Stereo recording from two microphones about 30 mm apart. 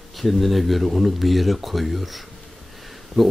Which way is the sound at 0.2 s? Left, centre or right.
Centre.